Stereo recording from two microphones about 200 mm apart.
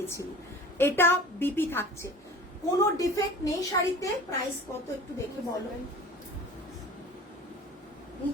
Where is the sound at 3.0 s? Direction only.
15° left (ahead or behind).